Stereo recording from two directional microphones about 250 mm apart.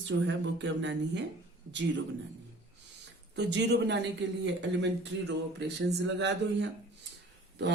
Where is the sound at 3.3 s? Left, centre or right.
Right.